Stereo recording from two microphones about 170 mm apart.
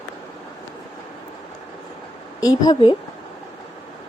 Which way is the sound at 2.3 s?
20° left (ahead or behind).